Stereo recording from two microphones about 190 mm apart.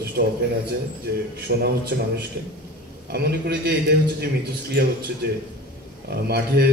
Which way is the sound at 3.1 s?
55° right (ahead or behind).